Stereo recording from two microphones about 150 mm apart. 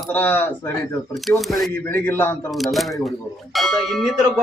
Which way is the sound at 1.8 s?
10° left (ahead or behind).